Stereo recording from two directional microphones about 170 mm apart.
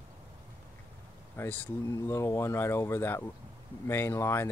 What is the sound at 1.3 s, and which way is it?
Speech, 10° left (ahead or behind).